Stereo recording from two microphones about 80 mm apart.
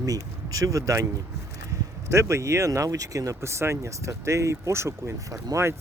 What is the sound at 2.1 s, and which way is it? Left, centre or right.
Speech, right.